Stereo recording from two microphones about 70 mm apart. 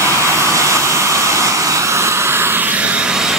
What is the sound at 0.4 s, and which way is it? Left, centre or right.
Vehicle, right.